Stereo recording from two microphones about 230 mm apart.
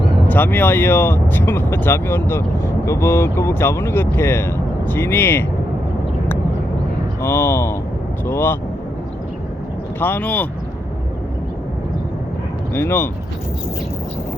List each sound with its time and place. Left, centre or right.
0.3 s speech: centre
7.2 s speech: centre
10.0 s speech: centre
12.7 s speech: centre